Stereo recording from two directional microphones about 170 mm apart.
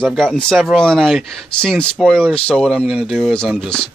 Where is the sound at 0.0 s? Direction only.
5° left (ahead or behind).